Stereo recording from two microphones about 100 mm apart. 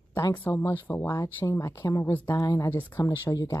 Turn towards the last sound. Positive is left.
turn(degrees=30)  # may be behind; listen again after turning